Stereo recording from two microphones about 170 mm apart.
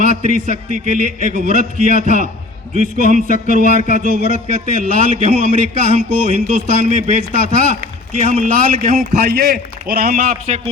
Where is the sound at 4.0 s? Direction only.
50° right (ahead or behind).